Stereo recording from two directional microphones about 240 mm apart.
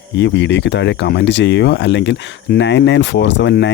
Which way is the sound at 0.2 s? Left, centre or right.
Left.